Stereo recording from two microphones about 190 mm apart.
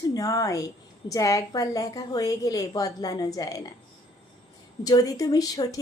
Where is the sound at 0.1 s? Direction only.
20° left (ahead or behind).